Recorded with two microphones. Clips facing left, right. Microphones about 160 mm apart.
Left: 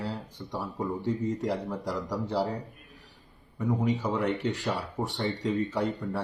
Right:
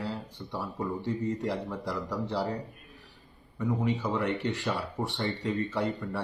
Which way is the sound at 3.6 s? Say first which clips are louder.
Left 1 dB; 15° left (ahead or behind).